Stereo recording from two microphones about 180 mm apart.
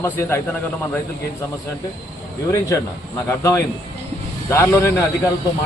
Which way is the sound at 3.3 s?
15° left (ahead or behind).